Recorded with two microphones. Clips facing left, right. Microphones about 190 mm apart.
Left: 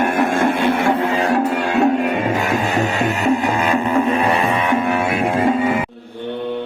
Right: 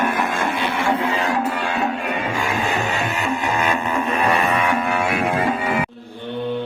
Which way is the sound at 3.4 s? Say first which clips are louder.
Left 4 dB; 35° left (ahead or behind).